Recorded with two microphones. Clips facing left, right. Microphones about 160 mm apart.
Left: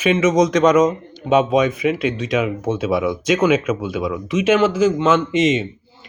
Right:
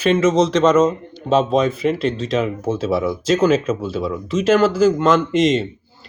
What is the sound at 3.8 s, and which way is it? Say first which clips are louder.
Speech: even; 30° right (ahead or behind).